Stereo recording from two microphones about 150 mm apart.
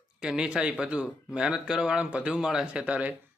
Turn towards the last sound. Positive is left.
turn(degrees=-10)  # may be behind; listen again after turning